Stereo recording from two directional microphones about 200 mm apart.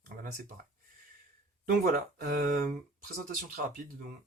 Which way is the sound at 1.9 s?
50° right (ahead or behind).